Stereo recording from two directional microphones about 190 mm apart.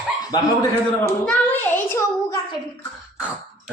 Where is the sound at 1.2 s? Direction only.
5° left (ahead or behind).